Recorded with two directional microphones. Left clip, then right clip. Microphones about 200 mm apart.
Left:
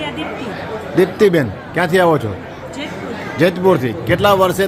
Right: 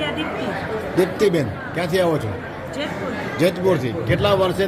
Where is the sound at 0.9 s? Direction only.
50° left (ahead or behind).